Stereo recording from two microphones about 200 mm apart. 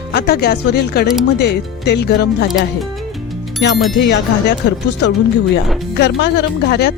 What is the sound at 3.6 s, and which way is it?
Speech, 60° left (ahead or behind).